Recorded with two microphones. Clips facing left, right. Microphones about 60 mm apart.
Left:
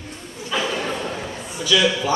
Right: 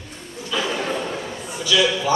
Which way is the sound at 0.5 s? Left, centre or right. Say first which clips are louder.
Left 1 dB; left.